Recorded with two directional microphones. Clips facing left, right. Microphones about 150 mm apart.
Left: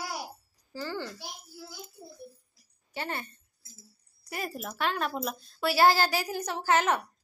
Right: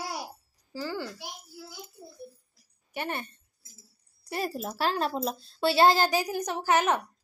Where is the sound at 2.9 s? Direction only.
20° right (ahead or behind).